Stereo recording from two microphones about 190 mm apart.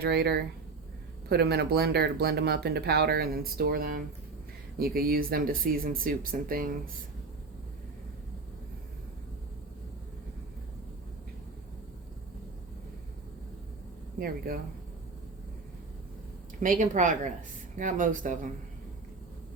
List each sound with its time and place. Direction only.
0.0 s speech: 60° right (ahead or behind)
14.2 s speech: 50° right (ahead or behind)
16.6 s speech: 45° right (ahead or behind)